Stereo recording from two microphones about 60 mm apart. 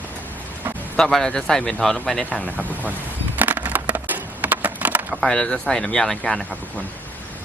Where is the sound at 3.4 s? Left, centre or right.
Right.